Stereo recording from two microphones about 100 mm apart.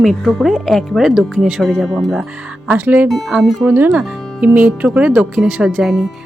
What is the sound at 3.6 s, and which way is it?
Speech, 20° right (ahead or behind).